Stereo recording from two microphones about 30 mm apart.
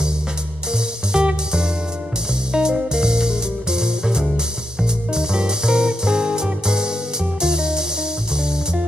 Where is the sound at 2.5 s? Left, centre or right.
Right.